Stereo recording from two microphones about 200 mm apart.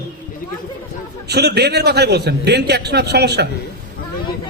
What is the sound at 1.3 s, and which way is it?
A man's voice, 55° right (ahead or behind).